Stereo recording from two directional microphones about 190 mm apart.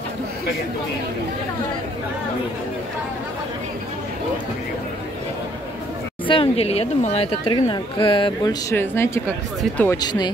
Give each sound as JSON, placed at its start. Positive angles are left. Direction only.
{"t": 6.2, "sound": "speech", "side_deg": 30}
{"t": 9.9, "sound": "speech", "side_deg": 20}